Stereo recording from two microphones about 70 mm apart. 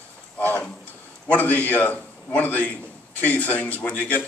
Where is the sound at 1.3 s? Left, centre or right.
Left.